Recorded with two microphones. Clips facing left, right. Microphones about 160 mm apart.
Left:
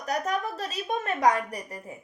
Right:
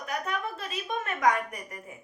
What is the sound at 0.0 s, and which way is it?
A woman's voice, 40° left (ahead or behind).